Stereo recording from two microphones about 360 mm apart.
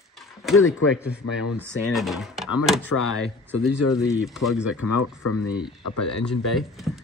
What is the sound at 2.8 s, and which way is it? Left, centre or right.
Speech, left.